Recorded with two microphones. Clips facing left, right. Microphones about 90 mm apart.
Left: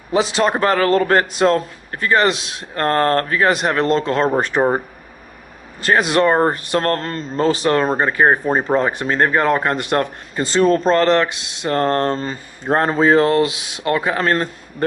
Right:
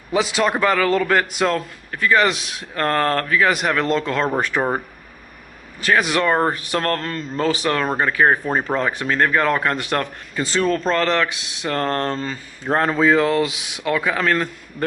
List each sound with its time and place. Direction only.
0.1 s speech: 30° left (ahead or behind)
0.6 s a man's voice: 45° left (ahead or behind); by 4.7 s 20° left (ahead or behind)
5.8 s a man's voice: 30° left (ahead or behind)